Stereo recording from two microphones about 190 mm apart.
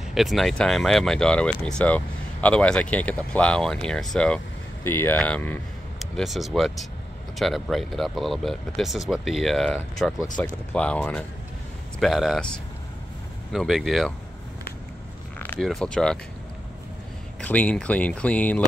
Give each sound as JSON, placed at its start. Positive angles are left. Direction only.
{"t": 0.1, "sound": "speech", "side_deg": 0}
{"t": 15.3, "sound": "speech", "side_deg": 10}
{"t": 17.4, "sound": "speech", "side_deg": 5}